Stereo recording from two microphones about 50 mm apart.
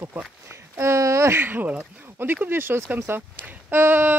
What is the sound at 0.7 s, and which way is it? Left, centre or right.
Speech, right.